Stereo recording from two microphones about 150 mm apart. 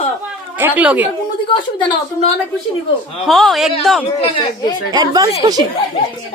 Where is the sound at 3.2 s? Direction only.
Centre (ahead or behind).